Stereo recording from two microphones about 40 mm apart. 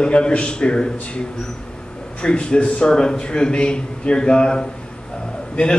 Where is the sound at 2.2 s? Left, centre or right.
Left.